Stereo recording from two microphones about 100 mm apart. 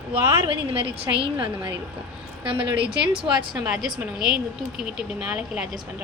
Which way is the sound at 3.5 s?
5° right (ahead or behind).